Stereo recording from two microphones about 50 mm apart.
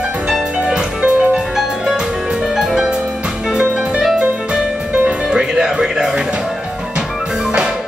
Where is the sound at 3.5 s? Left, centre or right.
Centre.